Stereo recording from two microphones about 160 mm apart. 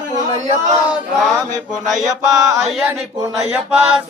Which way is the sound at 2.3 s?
20° right (ahead or behind).